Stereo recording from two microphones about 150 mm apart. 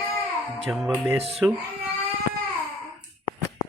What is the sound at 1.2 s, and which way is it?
Speech, 40° right (ahead or behind).